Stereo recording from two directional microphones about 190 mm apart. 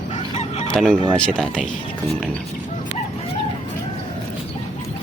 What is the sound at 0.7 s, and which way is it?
Fowl, 5° left (ahead or behind).